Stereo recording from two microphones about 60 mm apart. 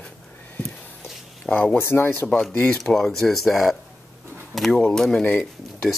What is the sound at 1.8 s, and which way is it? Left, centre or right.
Speech, left.